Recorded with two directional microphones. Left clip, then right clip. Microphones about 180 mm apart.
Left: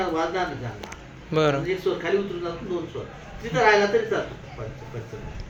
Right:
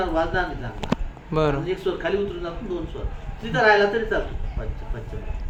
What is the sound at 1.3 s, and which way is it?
Speech, 15° right (ahead or behind).